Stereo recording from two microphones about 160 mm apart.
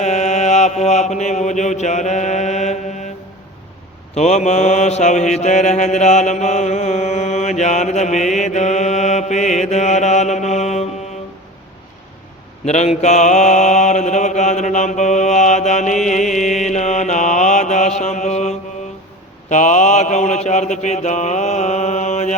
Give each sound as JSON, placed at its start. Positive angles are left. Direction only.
{"t": 0.0, "sound": "mantra", "side_deg": 45}
{"t": 4.1, "sound": "mantra", "side_deg": 45}
{"t": 12.6, "sound": "mantra", "side_deg": 45}